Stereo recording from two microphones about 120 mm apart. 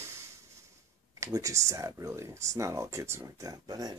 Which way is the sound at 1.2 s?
25° right (ahead or behind).